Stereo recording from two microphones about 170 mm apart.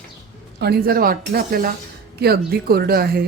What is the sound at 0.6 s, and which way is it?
A woman's voice, 65° right (ahead or behind).